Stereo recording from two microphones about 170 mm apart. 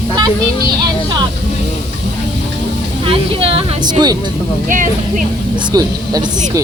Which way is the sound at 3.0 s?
35° right (ahead or behind).